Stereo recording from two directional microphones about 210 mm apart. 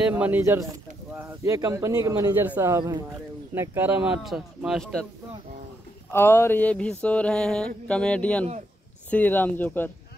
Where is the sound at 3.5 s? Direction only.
10° right (ahead or behind).